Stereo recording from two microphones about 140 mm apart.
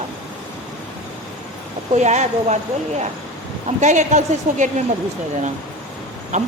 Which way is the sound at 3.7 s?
60° right (ahead or behind).